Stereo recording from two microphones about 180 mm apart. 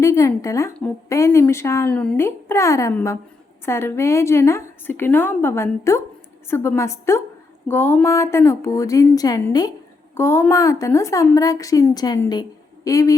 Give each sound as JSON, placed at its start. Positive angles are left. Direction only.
{"t": 0.0, "sound": "a woman's voice", "side_deg": 15}